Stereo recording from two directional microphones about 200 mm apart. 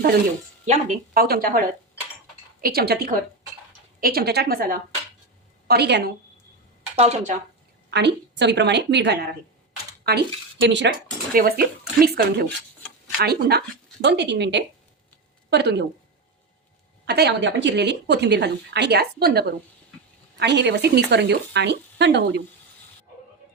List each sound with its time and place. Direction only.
0.6 s speech: 35° right (ahead or behind); by 6.1 s 55° right (ahead or behind)
6.9 s speech: 35° right (ahead or behind)
7.9 s speech: 60° right (ahead or behind)
10.7 s speech: 60° right (ahead or behind)
11.3 s speech: 50° right (ahead or behind)
17.1 s speech: 55° right (ahead or behind)